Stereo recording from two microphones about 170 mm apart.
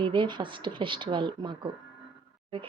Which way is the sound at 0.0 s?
30° right (ahead or behind).